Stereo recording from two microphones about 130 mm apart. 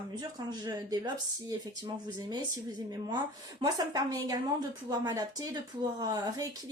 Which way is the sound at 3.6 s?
30° right (ahead or behind).